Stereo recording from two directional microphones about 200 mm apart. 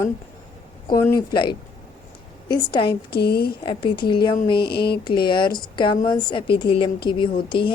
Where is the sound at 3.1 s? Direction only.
50° left (ahead or behind).